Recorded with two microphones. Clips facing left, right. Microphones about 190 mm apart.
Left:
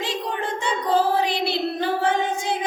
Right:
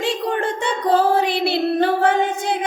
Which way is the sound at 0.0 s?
55° right (ahead or behind).